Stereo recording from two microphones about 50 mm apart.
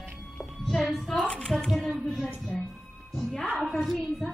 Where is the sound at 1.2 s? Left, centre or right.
Centre.